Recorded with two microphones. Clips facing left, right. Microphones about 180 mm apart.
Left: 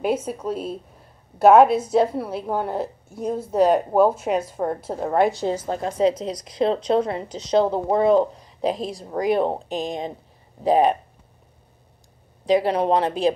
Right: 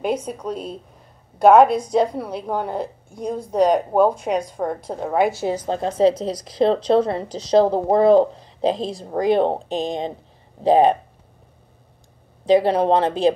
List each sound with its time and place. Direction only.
0.0 s a woman's voice: 5° left (ahead or behind)
5.7 s speech: 30° right (ahead or behind)
12.4 s speech: 30° right (ahead or behind)